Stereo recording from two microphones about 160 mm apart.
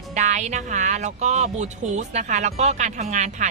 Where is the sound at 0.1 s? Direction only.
50° right (ahead or behind).